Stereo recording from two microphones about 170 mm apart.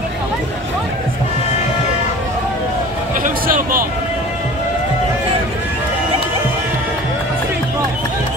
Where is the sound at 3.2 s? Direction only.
55° right (ahead or behind).